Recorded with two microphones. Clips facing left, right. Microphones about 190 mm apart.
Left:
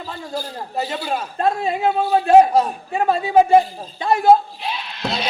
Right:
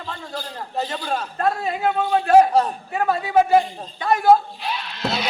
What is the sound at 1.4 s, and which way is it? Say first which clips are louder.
Speech: left 3 dB; 25° left (ahead or behind).